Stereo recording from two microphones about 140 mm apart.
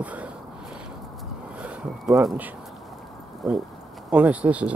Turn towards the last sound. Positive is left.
turn(degrees=-10)  # may be behind; listen again after turning